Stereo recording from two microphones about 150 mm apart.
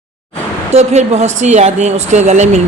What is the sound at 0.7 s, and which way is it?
Speech, 45° right (ahead or behind).